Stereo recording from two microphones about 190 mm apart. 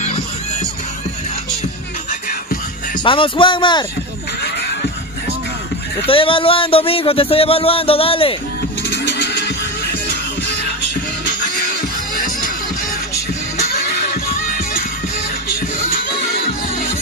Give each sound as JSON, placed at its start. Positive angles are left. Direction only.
{"t": 3.0, "sound": "speech", "side_deg": 25}
{"t": 6.0, "sound": "speech", "side_deg": 30}
{"t": 8.9, "sound": "music", "side_deg": 65}
{"t": 13.6, "sound": "music", "side_deg": 55}